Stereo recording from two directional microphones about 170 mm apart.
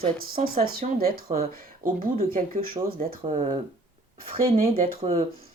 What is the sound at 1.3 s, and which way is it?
Speech, 40° right (ahead or behind).